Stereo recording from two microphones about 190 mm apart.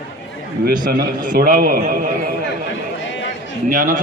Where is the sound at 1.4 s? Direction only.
50° right (ahead or behind).